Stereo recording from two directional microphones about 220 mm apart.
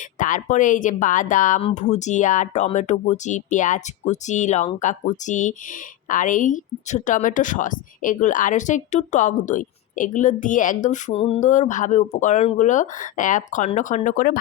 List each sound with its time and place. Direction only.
0.2 s a woman's voice: 35° left (ahead or behind)